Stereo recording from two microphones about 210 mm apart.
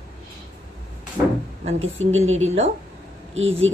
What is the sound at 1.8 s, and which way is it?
Speech, 70° right (ahead or behind).